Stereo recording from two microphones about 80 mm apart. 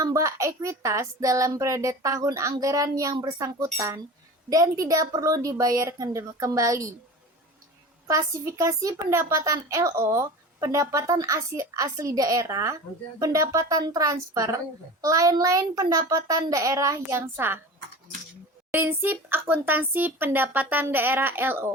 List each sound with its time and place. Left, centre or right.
0.0 s a woman's voice: right
8.0 s a woman's voice: right
17.1 s speech: right
18.7 s speech: right